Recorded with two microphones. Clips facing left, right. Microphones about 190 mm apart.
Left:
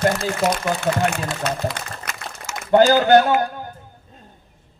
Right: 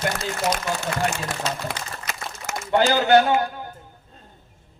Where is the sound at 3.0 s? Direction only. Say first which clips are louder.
Left 2 dB; 45° left (ahead or behind).